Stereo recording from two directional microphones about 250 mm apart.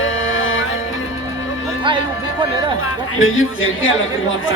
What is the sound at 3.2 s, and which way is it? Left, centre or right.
Speech, left.